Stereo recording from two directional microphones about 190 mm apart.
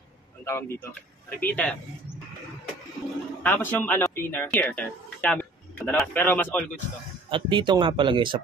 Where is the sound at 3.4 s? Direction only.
10° left (ahead or behind).